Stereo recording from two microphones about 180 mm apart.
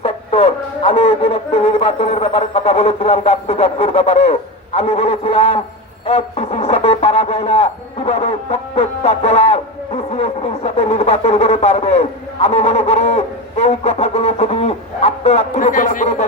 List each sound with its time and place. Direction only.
0.0 s speech: 35° left (ahead or behind)
15.5 s speech: 50° left (ahead or behind)